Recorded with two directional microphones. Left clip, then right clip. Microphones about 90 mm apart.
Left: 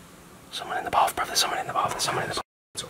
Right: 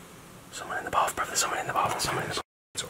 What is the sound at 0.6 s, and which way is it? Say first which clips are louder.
Speech: left 4 dB; 35° left (ahead or behind).